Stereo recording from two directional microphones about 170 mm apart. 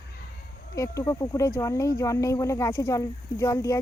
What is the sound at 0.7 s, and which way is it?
Speech, 20° left (ahead or behind).